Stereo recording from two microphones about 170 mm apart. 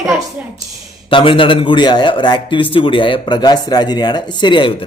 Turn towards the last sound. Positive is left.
turn(degrees=30)  # may be behind; listen again after turning